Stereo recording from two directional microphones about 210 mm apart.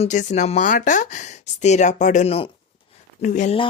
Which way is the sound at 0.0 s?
35° left (ahead or behind).